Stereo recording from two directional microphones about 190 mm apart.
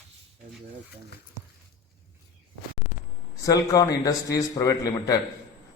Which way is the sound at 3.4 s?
20° left (ahead or behind).